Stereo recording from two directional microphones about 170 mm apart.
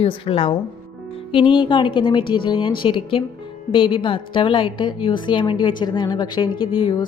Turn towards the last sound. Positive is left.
turn(degrees=30)  # may be behind; listen again after turning